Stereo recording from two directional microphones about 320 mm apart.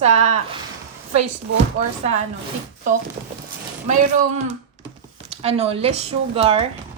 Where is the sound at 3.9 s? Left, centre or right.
Right.